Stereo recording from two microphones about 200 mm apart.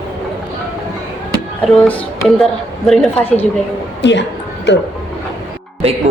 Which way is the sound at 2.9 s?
5° left (ahead or behind).